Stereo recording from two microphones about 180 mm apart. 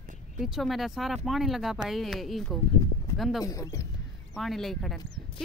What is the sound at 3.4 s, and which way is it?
Speech, 20° left (ahead or behind).